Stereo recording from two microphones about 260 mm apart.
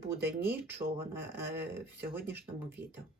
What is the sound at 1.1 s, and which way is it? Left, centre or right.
Speech, centre.